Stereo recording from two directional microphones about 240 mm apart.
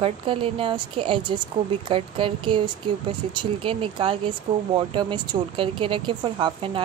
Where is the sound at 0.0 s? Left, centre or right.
Right.